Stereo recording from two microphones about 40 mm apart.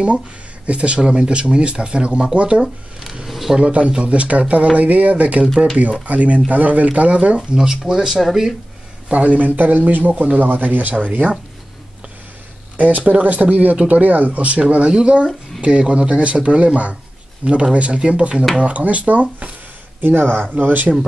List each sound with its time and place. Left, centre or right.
0.7 s speech: right
2.6 s speech: centre
3.3 s zipper: centre
3.5 s speech: right
7.3 s speech: centre
9.1 s a man's voice: right
12.7 s speech: right
20.0 s speech: right
20.5 s a man's voice: right